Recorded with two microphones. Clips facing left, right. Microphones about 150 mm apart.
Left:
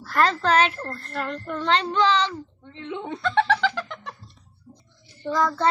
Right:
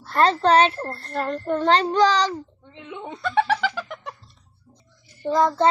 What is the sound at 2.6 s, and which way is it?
Speech, 10° right (ahead or behind).